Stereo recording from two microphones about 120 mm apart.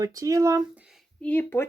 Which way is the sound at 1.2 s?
15° left (ahead or behind).